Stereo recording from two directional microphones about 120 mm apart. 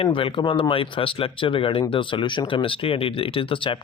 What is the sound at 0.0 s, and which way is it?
Speech, 45° left (ahead or behind).